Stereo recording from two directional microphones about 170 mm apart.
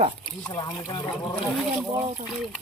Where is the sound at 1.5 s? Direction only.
5° right (ahead or behind).